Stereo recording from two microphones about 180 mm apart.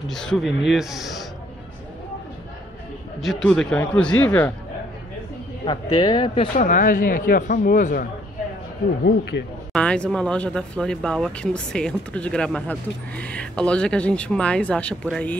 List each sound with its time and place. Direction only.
0.1 s speech: 5° left (ahead or behind)
3.2 s a man's voice: centre (ahead or behind)
5.7 s speech: 20° left (ahead or behind)
6.6 s speech: 45° left (ahead or behind)
9.0 s speech: 65° left (ahead or behind)
9.7 s speech: 5° left (ahead or behind)